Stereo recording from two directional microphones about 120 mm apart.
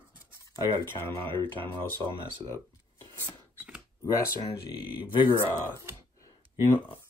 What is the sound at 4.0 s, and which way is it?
Speech, 25° left (ahead or behind).